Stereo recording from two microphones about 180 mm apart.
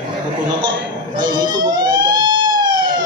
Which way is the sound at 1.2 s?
25° right (ahead or behind).